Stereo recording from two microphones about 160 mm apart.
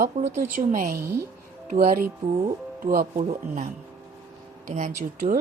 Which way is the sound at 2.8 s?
60° right (ahead or behind).